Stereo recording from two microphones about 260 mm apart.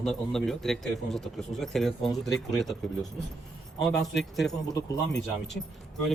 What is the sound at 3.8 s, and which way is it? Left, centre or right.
Speech, centre.